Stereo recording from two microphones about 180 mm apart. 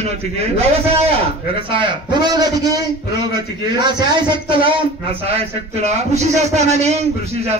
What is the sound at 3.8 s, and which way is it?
Speech, 25° right (ahead or behind).